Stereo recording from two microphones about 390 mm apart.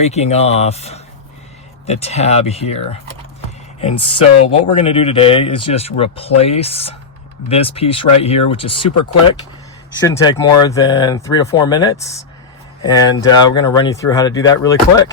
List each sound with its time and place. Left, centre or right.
0.0 s speech: centre
10.0 s speech: centre